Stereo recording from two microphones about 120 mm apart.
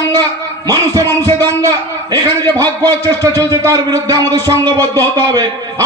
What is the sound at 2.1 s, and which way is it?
A man's voice, 30° right (ahead or behind).